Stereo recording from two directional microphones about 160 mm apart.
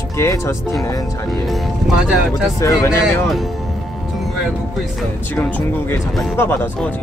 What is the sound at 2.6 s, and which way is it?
Speech, 20° left (ahead or behind).